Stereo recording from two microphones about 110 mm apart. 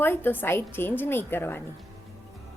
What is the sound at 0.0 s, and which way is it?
A woman's voice, 20° left (ahead or behind).